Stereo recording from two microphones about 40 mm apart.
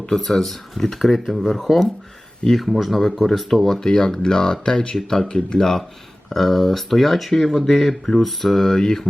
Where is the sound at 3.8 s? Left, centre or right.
Centre.